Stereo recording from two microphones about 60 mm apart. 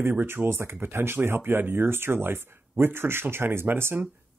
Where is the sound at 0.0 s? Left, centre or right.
Right.